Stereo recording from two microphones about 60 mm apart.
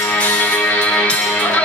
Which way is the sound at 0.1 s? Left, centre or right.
Left.